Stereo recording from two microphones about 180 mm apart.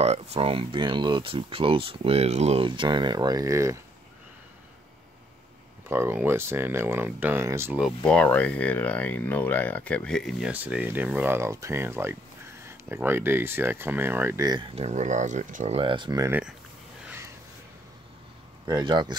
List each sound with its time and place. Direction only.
0.0 s speech: 35° right (ahead or behind); by 3.8 s 15° right (ahead or behind)
5.9 s speech: 10° right (ahead or behind)
7.8 s speech: 5° left (ahead or behind); by 14.7 s 20° right (ahead or behind)
14.8 s speech: 40° right (ahead or behind); by 16.3 s 25° right (ahead or behind)
16.3 s speech: 10° right (ahead or behind)
18.7 s speech: 25° right (ahead or behind)